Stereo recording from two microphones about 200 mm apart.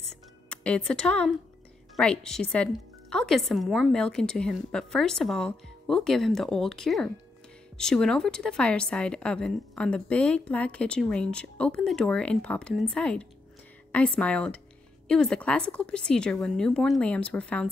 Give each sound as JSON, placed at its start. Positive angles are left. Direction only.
{"t": 0.0, "sound": "music", "side_deg": 5}
{"t": 2.0, "sound": "a woman's voice", "side_deg": 5}